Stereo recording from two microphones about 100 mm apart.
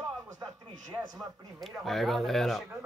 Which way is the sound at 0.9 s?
20° right (ahead or behind).